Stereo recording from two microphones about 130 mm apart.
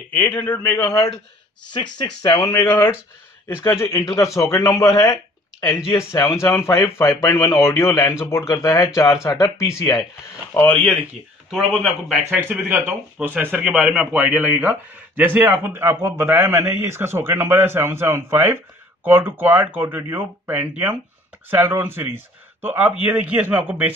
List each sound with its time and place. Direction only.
0.1 s speech: 15° left (ahead or behind)
10.5 s speech: 15° left (ahead or behind)
12.4 s a man's voice: 15° right (ahead or behind)